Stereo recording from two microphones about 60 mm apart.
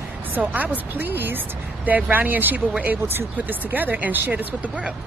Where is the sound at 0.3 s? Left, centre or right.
Right.